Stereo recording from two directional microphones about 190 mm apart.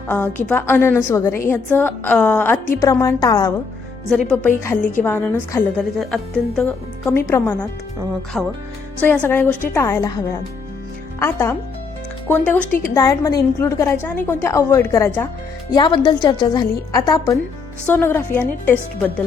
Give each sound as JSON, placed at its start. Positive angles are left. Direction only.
{"t": 0.1, "sound": "a woman's voice", "side_deg": 10}
{"t": 4.1, "sound": "a woman's voice", "side_deg": 5}
{"t": 11.2, "sound": "a woman's voice", "side_deg": 10}
{"t": 15.7, "sound": "a woman's voice", "side_deg": 25}